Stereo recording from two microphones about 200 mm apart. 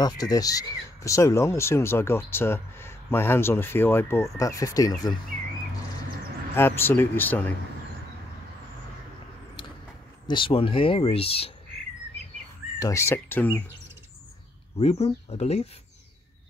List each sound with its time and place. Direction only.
0.0 s speech: 20° left (ahead or behind)
6.5 s speech: 10° left (ahead or behind)
10.2 s speech: 25° left (ahead or behind)
12.7 s speech: 15° left (ahead or behind)
14.8 s speech: 30° left (ahead or behind)